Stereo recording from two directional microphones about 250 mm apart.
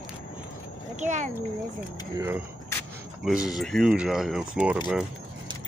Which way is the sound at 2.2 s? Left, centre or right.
Centre.